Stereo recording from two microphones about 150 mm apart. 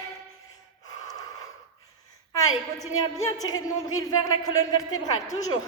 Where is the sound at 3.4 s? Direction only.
25° left (ahead or behind).